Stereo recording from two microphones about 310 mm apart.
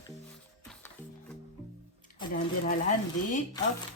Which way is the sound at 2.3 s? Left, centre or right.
Left.